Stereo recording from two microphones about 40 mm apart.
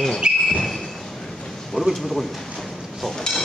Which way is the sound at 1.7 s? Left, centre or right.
Centre.